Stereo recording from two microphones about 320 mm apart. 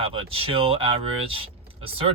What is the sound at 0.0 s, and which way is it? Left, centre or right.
Speech, centre.